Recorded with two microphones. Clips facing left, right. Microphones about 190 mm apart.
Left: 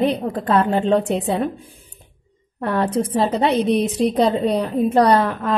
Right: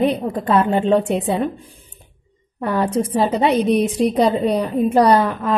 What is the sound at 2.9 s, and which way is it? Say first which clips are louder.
Speech: right 1 dB; 25° right (ahead or behind).